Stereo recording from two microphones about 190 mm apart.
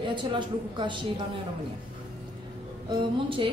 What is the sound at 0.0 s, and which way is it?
A woman's voice, 25° right (ahead or behind).